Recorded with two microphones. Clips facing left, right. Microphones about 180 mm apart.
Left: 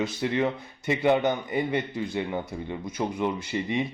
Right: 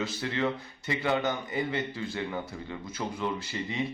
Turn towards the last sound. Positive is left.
turn(degrees=20)  # may be behind; listen again after turning